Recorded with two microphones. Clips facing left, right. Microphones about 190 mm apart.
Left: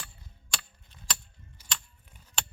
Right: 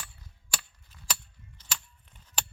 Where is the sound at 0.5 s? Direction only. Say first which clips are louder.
Right 1 dB; 5° right (ahead or behind).